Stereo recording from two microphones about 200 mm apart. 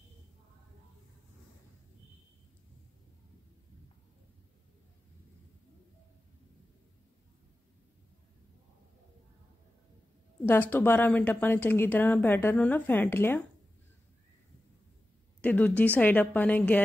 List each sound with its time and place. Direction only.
10.4 s speech: 10° left (ahead or behind)
15.4 s speech: 10° left (ahead or behind)